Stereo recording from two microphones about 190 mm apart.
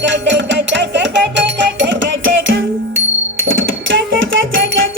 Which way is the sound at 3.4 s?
90° right.